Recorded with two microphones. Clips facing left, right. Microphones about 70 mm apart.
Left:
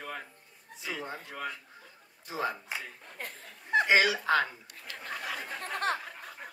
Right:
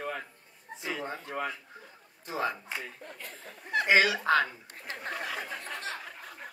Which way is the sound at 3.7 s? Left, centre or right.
Left.